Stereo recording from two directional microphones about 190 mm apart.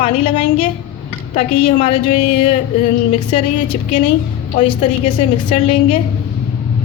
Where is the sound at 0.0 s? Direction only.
35° left (ahead or behind).